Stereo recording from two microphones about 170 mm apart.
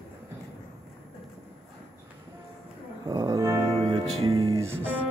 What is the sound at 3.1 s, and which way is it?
Music, 20° right (ahead or behind).